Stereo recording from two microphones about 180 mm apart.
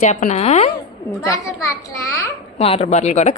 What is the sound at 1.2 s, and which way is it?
Speech, 15° left (ahead or behind).